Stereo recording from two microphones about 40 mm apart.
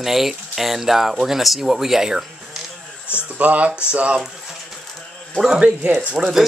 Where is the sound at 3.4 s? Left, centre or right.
Right.